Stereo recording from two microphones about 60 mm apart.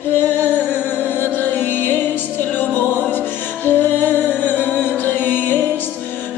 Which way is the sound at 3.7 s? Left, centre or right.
Left.